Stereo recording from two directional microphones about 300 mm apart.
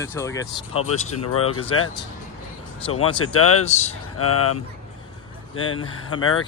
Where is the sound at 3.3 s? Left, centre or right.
Left.